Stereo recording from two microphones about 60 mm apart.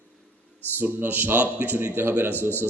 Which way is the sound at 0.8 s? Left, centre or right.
Right.